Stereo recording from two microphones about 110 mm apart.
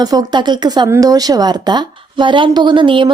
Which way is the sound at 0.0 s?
35° right (ahead or behind).